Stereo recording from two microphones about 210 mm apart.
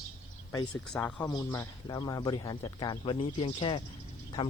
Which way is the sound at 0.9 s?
5° left (ahead or behind).